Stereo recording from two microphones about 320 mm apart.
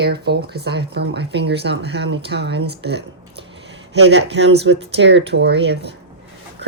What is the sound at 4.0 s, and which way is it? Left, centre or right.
Speech, right.